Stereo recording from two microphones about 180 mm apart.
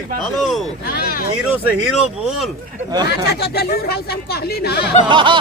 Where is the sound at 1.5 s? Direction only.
5° right (ahead or behind).